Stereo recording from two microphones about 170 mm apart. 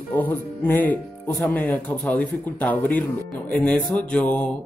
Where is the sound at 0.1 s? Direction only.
10° left (ahead or behind).